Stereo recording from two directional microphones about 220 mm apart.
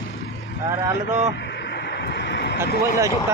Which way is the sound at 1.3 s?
50° left (ahead or behind).